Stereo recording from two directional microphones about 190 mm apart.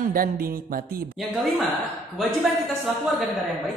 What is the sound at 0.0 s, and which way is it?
Speech, 50° right (ahead or behind).